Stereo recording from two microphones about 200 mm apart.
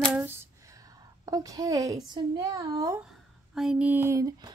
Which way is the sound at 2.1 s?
20° right (ahead or behind).